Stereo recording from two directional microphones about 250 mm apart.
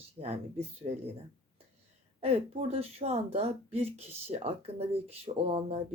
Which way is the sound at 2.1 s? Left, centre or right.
Right.